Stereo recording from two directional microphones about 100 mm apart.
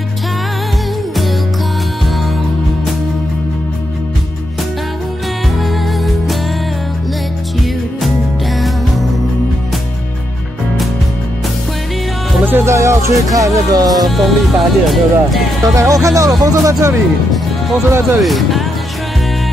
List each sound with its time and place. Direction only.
5.6 s music: centre (ahead or behind)
8.5 s music: centre (ahead or behind)
12.4 s speech: 25° right (ahead or behind)
14.0 s speech: centre (ahead or behind)
15.6 s speech: 35° right (ahead or behind)
18.2 s speech: centre (ahead or behind)